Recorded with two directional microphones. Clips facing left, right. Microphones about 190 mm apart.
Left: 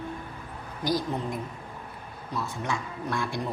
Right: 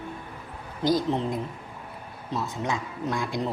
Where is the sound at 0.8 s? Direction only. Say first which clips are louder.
Right 4 dB; 20° right (ahead or behind).